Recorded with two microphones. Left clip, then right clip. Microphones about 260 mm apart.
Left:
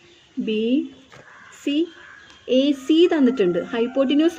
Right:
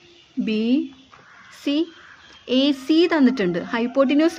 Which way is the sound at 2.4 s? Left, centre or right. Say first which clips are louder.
Left 1 dB; right.